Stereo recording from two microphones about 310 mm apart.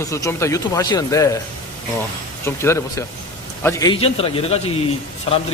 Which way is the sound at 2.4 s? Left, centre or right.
Centre.